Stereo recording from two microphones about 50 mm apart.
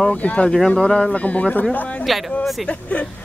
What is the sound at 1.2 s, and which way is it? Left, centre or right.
Speech, left.